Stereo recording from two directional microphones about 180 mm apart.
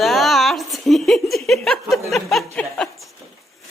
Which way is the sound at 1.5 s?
Centre (ahead or behind).